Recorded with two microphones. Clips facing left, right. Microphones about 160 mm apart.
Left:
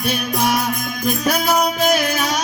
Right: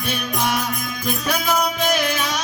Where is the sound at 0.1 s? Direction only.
45° left (ahead or behind).